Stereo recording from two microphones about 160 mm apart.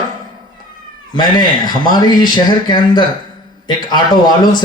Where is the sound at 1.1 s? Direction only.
25° left (ahead or behind).